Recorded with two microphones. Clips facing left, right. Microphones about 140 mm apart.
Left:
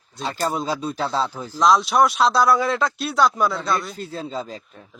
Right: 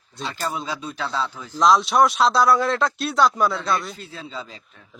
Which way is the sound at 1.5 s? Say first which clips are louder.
Even; centre (ahead or behind).